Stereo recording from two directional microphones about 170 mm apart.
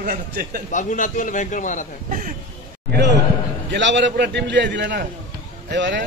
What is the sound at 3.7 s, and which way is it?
A man's voice, 90° right.